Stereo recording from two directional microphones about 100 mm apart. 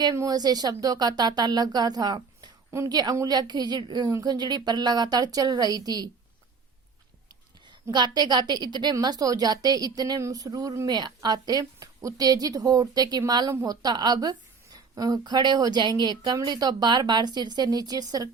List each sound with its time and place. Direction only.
0.2 s a woman's voice: 40° right (ahead or behind)
7.9 s a woman's voice: 45° right (ahead or behind)